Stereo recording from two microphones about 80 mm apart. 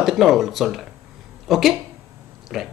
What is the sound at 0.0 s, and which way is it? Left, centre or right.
Speech, centre.